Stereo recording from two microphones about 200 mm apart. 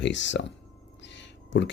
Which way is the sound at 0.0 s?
65° left (ahead or behind).